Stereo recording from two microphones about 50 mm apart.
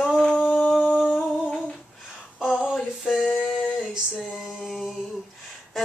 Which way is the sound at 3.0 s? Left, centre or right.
Centre.